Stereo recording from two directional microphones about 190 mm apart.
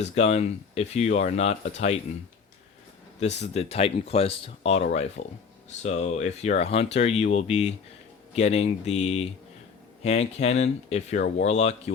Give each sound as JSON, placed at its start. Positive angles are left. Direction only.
{"t": 0.2, "sound": "speech", "side_deg": 35}
{"t": 3.2, "sound": "speech", "side_deg": 35}